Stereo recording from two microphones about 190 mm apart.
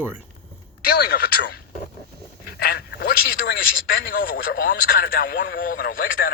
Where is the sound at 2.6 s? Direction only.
55° left (ahead or behind).